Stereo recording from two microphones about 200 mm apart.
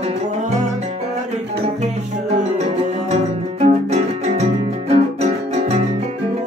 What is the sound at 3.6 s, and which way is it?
Music, 35° right (ahead or behind).